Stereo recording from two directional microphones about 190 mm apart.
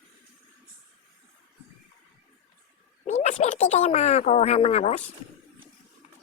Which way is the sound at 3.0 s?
35° left (ahead or behind).